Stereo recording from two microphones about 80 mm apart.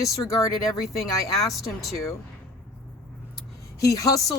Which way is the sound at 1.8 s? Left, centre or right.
Left.